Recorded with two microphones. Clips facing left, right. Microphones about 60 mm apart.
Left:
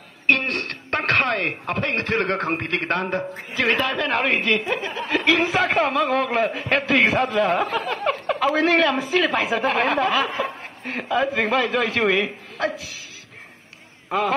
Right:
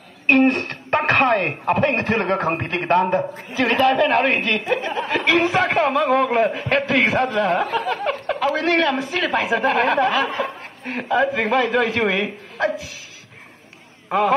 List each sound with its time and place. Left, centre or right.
0.3 s speech: centre
1.3 s a man's voice: centre
3.2 s a man's voice: centre